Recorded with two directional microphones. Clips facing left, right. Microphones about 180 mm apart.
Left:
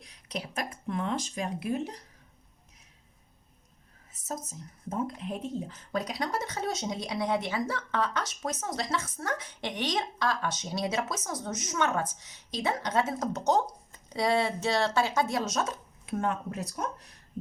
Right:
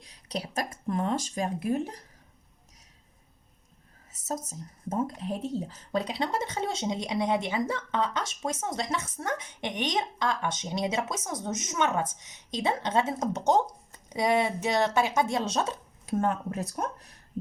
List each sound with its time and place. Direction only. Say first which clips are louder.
0.0 s speech: right 2 dB; 35° right (ahead or behind)
4.9 s speech: right 3 dB; 40° right (ahead or behind)